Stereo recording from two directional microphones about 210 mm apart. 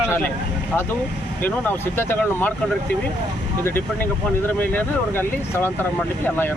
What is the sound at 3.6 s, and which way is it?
Speech, 10° left (ahead or behind).